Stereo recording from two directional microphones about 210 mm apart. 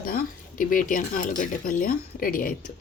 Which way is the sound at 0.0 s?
45° left (ahead or behind).